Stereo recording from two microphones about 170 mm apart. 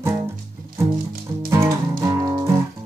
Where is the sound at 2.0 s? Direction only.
25° right (ahead or behind).